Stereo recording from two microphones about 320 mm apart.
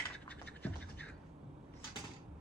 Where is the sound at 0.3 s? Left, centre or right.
Centre.